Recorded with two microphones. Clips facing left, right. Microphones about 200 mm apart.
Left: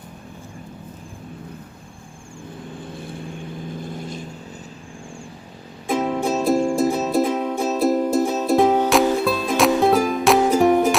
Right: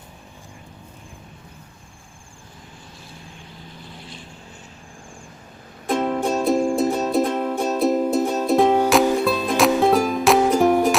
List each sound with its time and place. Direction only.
2.9 s vehicle: 55° left (ahead or behind)
5.9 s music: 5° left (ahead or behind)